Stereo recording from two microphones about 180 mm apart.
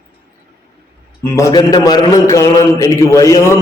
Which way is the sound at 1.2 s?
15° left (ahead or behind).